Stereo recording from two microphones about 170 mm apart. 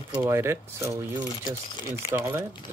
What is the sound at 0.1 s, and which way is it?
Speech, 15° right (ahead or behind).